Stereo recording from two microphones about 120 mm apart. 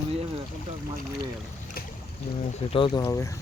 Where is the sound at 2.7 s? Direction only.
45° left (ahead or behind).